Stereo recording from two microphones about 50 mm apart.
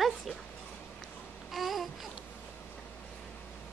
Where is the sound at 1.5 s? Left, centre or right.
Centre.